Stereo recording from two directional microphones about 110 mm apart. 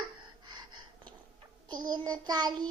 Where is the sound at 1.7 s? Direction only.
40° right (ahead or behind).